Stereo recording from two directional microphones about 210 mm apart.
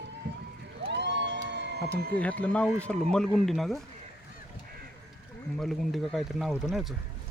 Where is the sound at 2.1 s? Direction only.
5° left (ahead or behind).